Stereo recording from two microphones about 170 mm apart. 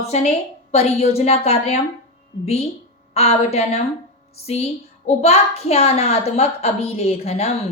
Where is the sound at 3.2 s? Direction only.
35° left (ahead or behind).